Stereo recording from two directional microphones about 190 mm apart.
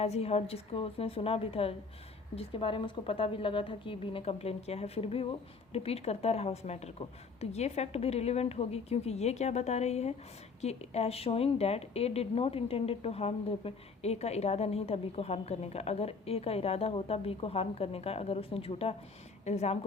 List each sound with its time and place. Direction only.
0.0 s speech: 35° left (ahead or behind)